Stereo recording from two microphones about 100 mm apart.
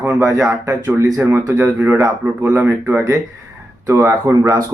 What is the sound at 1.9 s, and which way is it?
Speech, 40° right (ahead or behind).